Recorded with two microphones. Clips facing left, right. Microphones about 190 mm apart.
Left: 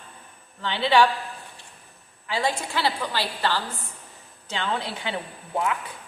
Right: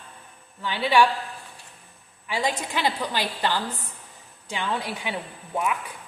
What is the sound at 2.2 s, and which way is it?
A woman's voice, 15° right (ahead or behind).